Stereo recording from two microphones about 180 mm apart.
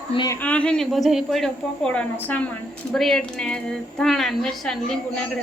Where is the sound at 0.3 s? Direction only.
10° left (ahead or behind).